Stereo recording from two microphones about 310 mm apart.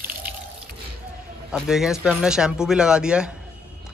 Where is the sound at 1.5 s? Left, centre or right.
Centre.